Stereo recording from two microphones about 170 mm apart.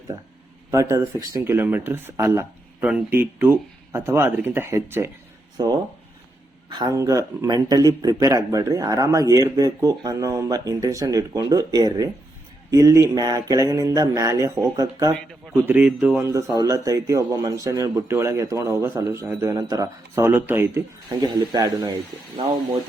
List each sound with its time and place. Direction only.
0.7 s speech: 20° right (ahead or behind)
5.5 s speech: 25° right (ahead or behind)
15.6 s speech: 10° right (ahead or behind)
16.3 s speech: 20° right (ahead or behind)